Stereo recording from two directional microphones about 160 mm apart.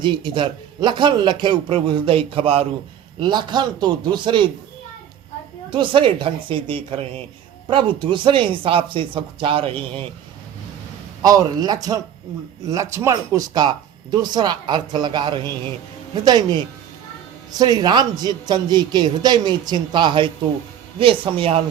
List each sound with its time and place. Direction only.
0.0 s speech: 30° right (ahead or behind)
5.7 s speech: 30° right (ahead or behind)
11.2 s speech: 20° right (ahead or behind)